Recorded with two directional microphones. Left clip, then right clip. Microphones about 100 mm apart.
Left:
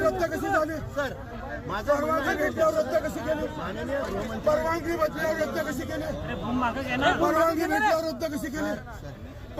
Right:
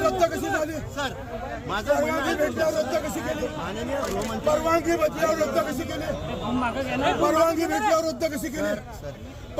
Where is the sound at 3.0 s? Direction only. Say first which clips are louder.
Even; 15° right (ahead or behind).